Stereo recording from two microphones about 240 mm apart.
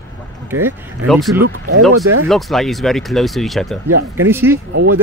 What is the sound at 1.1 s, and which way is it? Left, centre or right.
Speech, centre.